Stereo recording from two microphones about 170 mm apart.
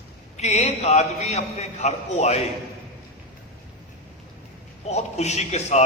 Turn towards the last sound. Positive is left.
turn(degrees=40)  # may be behind; listen again after turning